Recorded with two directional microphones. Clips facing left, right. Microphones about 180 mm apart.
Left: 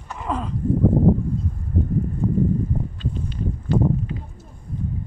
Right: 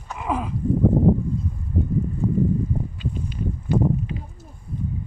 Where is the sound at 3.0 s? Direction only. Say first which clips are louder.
Left 1 dB; 10° right (ahead or behind).